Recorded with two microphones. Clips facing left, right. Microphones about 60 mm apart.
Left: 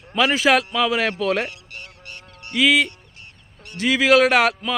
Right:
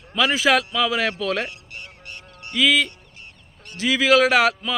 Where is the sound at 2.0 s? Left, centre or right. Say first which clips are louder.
Even; right.